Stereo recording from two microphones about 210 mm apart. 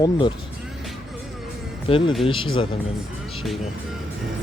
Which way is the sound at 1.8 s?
25° left (ahead or behind).